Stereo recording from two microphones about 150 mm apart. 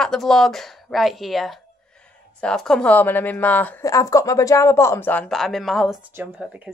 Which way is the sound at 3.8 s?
20° left (ahead or behind).